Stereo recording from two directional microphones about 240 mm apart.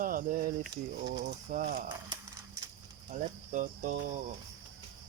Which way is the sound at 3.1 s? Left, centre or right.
Right.